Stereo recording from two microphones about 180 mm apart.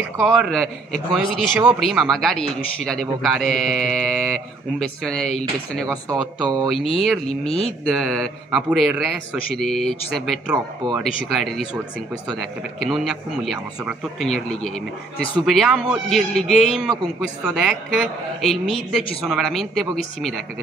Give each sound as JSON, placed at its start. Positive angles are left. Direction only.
{"t": 0.2, "sound": "a man's voice", "side_deg": 0}
{"t": 6.0, "sound": "speech", "side_deg": -20}
{"t": 6.7, "sound": "a man's voice", "side_deg": 0}